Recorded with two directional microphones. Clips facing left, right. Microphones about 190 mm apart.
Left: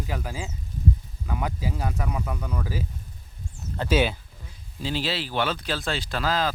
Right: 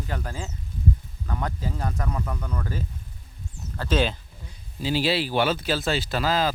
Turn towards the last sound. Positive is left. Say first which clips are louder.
# right 2 dB
turn(degrees=-5)  # may be behind; listen again after turning